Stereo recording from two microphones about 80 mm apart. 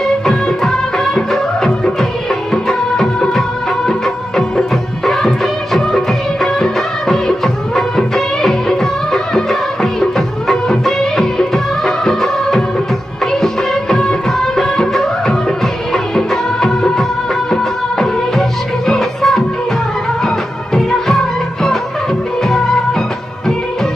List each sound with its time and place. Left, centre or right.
0.2 s music of bollywood: centre
18.9 s music: centre